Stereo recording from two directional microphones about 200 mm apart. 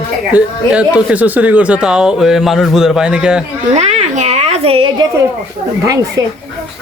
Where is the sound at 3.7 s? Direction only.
35° right (ahead or behind).